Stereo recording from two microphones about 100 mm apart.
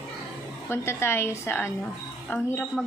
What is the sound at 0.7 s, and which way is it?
A woman's voice, 25° left (ahead or behind).